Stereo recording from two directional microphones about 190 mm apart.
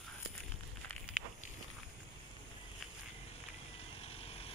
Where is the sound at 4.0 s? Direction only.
30° left (ahead or behind).